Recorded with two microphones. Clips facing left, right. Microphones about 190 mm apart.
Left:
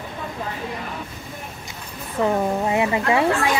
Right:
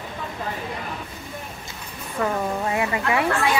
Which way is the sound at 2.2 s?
20° left (ahead or behind).